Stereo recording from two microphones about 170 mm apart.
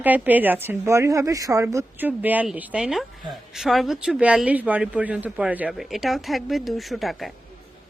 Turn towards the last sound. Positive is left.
turn(degrees=0)  # may be behind; listen again after turning